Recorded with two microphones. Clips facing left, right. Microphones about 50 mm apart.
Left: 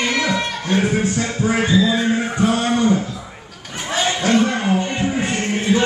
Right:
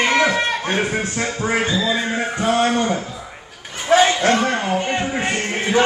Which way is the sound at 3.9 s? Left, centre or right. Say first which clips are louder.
Right 3 dB; right.